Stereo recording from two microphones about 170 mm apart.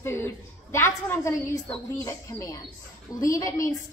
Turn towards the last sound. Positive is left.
turn(degrees=20)  # may be behind; listen again after turning